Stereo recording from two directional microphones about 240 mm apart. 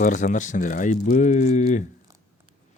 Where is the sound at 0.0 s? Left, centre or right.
Left.